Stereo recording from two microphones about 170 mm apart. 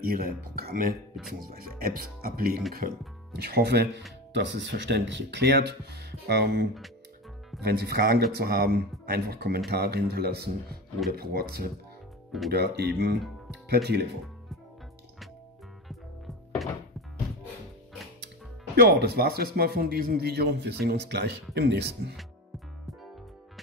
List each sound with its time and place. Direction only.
0.0 s a man's voice: 60° right (ahead or behind)
4.4 s a man's voice: 90° right; by 11.7 s 65° right (ahead or behind)
12.4 s a man's voice: 75° right (ahead or behind)
16.6 s music: centre (ahead or behind)
18.8 s a man's voice: 75° right (ahead or behind)